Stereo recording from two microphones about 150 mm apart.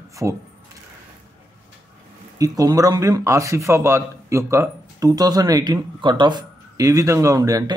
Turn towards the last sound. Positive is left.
turn(degrees=-25)  # may be behind; listen again after turning